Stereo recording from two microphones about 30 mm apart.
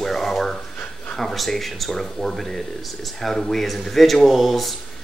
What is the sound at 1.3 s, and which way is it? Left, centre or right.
Speech, centre.